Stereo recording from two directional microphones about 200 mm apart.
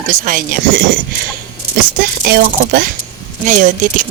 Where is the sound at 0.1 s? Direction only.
40° right (ahead or behind).